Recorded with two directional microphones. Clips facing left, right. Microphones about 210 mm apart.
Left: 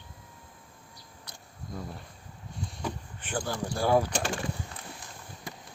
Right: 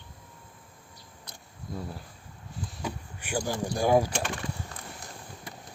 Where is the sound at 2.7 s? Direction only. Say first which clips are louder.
Even; 5° right (ahead or behind).